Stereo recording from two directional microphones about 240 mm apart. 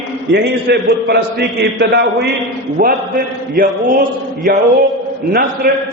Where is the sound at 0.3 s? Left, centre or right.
Right.